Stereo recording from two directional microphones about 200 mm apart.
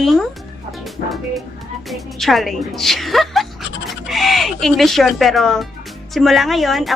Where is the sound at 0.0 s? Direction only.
Centre (ahead or behind).